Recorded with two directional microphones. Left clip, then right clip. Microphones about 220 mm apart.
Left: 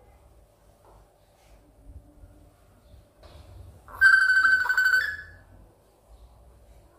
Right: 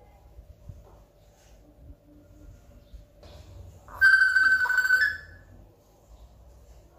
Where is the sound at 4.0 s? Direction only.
15° left (ahead or behind).